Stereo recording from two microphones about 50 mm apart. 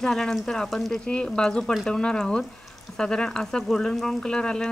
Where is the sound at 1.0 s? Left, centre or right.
Centre.